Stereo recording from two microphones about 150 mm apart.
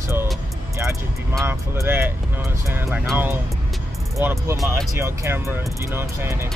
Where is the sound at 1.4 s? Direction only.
15° right (ahead or behind).